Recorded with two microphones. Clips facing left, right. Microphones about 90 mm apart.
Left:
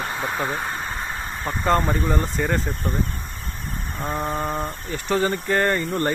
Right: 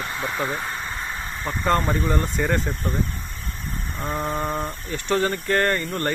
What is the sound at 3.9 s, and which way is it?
Speech, 5° left (ahead or behind).